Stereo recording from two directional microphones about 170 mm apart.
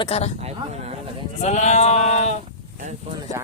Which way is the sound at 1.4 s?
40° left (ahead or behind).